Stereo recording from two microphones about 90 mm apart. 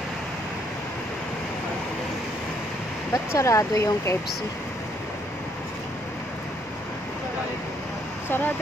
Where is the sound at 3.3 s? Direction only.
35° left (ahead or behind).